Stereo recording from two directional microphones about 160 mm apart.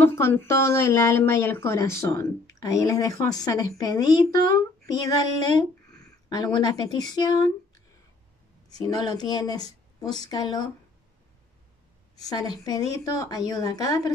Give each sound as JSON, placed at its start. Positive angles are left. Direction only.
{"t": 0.0, "sound": "a woman's voice", "side_deg": 15}
{"t": 8.6, "sound": "a woman's voice", "side_deg": 25}
{"t": 12.3, "sound": "a woman's voice", "side_deg": 25}